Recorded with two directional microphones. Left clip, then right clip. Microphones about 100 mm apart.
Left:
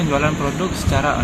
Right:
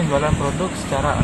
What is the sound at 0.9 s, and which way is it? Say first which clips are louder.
Speech: left 2 dB; 10° right (ahead or behind).